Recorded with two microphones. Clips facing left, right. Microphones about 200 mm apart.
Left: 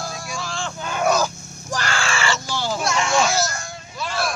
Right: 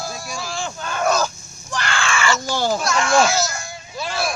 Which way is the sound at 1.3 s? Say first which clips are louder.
Left 6 dB; 65° left (ahead or behind).